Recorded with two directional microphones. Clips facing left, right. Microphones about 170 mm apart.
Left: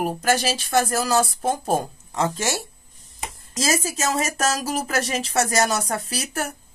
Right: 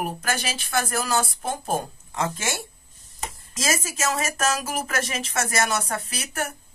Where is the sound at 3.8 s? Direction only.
35° left (ahead or behind).